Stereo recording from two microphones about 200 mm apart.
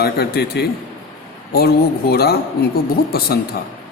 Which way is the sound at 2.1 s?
50° left (ahead or behind).